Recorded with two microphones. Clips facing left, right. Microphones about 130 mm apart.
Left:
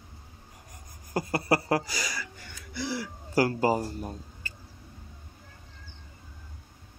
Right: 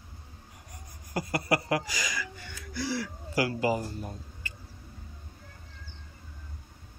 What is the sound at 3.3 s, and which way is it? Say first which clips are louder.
Speech: left 3 dB; 40° left (ahead or behind).